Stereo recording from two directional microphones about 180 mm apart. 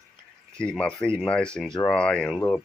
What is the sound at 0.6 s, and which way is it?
Speech, 5° left (ahead or behind).